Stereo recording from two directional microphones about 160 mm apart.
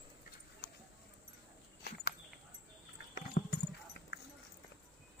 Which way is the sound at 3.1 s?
65° left (ahead or behind).